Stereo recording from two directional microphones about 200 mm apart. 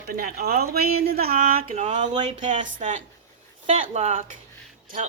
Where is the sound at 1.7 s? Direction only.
35° right (ahead or behind).